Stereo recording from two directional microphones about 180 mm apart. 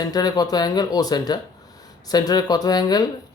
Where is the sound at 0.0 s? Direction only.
20° left (ahead or behind).